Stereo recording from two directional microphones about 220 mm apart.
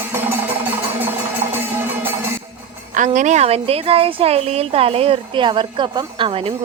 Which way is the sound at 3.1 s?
30° right (ahead or behind).